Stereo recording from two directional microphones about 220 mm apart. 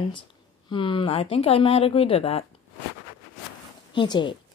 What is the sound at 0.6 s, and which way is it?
Speech, 25° left (ahead or behind).